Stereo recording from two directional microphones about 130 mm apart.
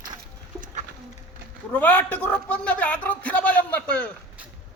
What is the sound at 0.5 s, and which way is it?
Bird, 25° right (ahead or behind).